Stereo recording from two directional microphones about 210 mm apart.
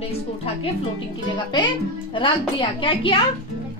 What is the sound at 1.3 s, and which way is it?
Speech, 20° left (ahead or behind).